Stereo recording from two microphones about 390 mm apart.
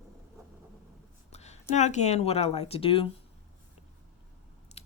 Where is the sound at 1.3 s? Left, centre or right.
Centre.